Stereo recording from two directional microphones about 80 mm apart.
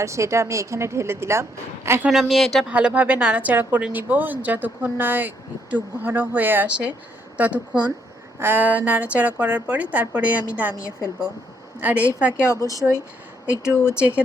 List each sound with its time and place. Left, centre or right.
0.0 s a woman's voice: right
2.0 s speech: centre
2.6 s a woman's voice: centre
8.4 s a woman's voice: right
12.5 s speech: left